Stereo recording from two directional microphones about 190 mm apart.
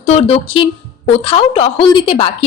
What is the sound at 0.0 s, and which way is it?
A woman's voice, 35° left (ahead or behind).